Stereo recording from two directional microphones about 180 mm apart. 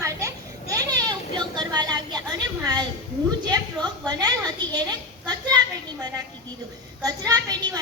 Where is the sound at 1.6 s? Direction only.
25° right (ahead or behind).